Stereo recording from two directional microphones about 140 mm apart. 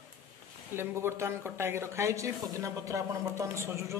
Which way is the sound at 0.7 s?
20° right (ahead or behind).